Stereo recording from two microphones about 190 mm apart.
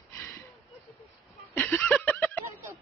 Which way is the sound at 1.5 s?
5° left (ahead or behind).